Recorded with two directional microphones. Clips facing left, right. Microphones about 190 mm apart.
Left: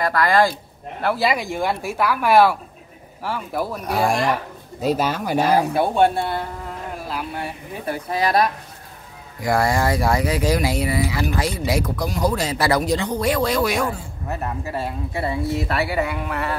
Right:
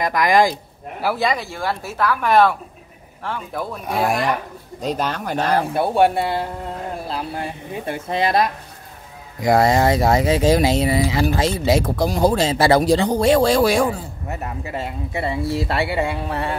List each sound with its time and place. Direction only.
0.0 s speech: 15° right (ahead or behind)
1.0 s speech: 5° left (ahead or behind)
1.4 s speech: 15° left (ahead or behind); by 6.1 s 5° right (ahead or behind)
7.1 s speech: 30° right (ahead or behind)
14.6 s speech: 20° right (ahead or behind)